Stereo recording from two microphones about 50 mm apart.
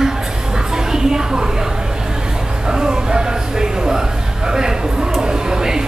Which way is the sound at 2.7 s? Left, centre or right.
Centre.